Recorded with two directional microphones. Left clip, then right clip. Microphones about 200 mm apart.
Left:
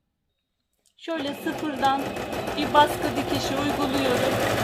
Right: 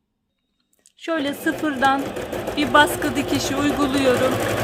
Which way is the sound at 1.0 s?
45° right (ahead or behind).